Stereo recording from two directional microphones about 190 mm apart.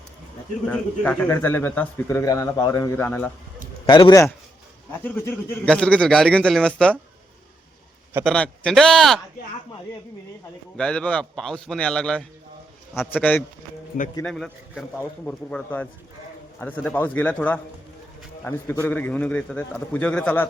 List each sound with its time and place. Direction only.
0.7 s speech: 10° left (ahead or behind)
3.8 s a man's voice: 20° left (ahead or behind)
5.0 s a man's voice: 10° left (ahead or behind)
8.2 s a man's voice: 5° left (ahead or behind)
10.8 s a man's voice: 5° left (ahead or behind)
14.2 s a man's voice: 5° left (ahead or behind)